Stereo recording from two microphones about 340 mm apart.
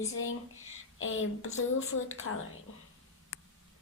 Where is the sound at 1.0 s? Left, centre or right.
Left.